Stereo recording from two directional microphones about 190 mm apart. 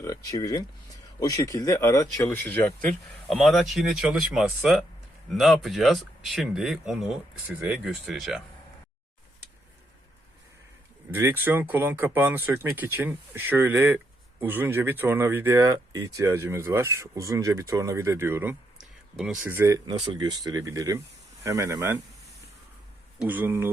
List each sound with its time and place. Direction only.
0.0 s speech: 20° left (ahead or behind); by 8.4 s centre (ahead or behind)
11.1 s speech: 10° right (ahead or behind)
23.1 s speech: 10° right (ahead or behind)